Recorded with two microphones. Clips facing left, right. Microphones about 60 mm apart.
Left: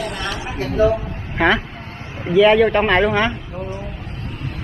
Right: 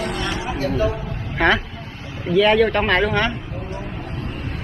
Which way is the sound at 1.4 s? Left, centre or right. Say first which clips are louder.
Left 1 dB; centre.